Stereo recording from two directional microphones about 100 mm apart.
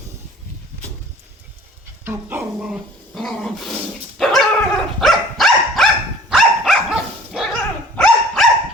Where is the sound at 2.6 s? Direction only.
Centre (ahead or behind).